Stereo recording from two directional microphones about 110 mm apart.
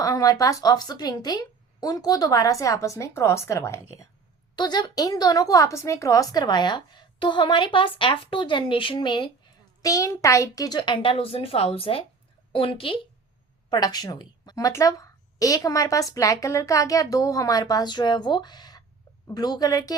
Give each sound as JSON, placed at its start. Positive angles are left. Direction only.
{"t": 0.0, "sound": "a woman's voice", "side_deg": 30}
{"t": 4.5, "sound": "a woman's voice", "side_deg": 40}
{"t": 9.8, "sound": "a woman's voice", "side_deg": 30}
{"t": 13.7, "sound": "a woman's voice", "side_deg": 40}